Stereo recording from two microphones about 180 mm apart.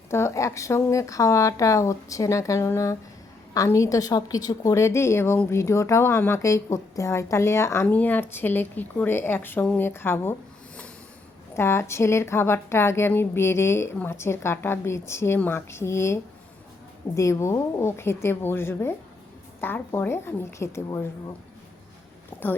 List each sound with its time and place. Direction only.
0.1 s a woman's voice: 15° left (ahead or behind)
11.5 s a woman's voice: 15° left (ahead or behind)